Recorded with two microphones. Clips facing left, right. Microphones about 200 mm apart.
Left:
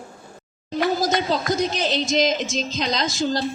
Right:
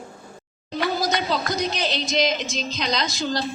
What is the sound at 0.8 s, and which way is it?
Speech, 45° left (ahead or behind).